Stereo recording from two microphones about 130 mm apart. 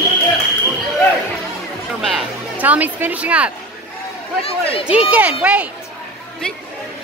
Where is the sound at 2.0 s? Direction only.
Centre (ahead or behind).